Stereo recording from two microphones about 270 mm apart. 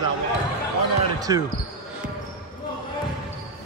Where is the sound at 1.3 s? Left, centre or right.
Centre.